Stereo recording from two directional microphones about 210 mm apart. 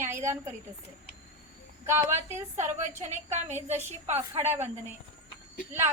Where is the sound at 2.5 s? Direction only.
35° right (ahead or behind).